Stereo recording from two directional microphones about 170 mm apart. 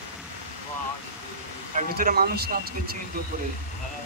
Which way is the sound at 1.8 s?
50° right (ahead or behind).